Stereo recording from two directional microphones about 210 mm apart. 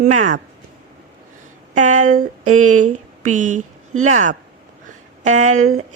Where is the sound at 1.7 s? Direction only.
35° right (ahead or behind).